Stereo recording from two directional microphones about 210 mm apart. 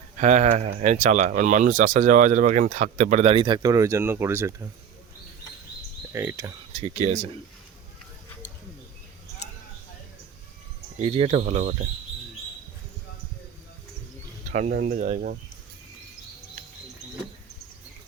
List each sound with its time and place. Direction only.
0.2 s speech: 35° right (ahead or behind); by 4.7 s 10° right (ahead or behind)
6.1 s speech: 10° right (ahead or behind)
6.7 s speech: 35° right (ahead or behind)
11.0 s speech: 30° right (ahead or behind)
14.5 s speech: 35° right (ahead or behind)